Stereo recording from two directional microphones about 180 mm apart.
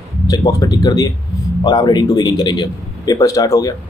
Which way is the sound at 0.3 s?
20° left (ahead or behind).